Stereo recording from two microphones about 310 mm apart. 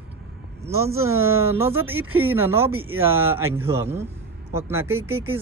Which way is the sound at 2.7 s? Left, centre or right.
Right.